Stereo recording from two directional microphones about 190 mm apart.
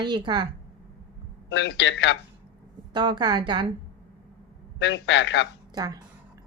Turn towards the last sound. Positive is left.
turn(degrees=-20)  # may be behind; listen again after turning